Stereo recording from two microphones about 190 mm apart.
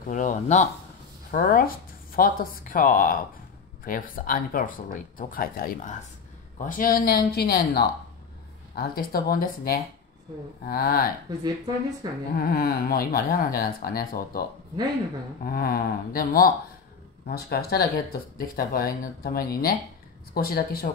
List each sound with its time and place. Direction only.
0.1 s speech: 40° left (ahead or behind)
12.0 s a sound: 20° right (ahead or behind)
12.4 s speech: 50° left (ahead or behind)
15.4 s speech: 50° left (ahead or behind)